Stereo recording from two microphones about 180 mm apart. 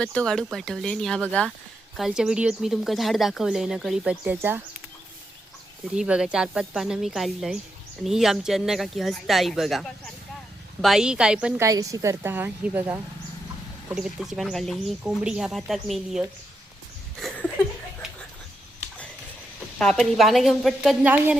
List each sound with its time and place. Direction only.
0.0 s speech: 5° left (ahead or behind); by 4.6 s 10° right (ahead or behind)
5.9 s a woman's voice: 5° right (ahead or behind)
17.2 s a sound: 5° left (ahead or behind)
19.8 s speech: 5° left (ahead or behind)